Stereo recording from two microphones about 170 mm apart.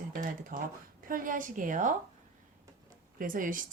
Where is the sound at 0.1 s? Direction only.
50° right (ahead or behind).